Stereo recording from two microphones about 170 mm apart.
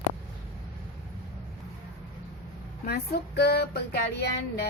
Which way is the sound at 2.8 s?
70° left (ahead or behind).